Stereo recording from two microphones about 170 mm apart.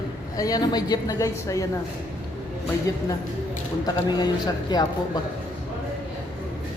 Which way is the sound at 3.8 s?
25° left (ahead or behind).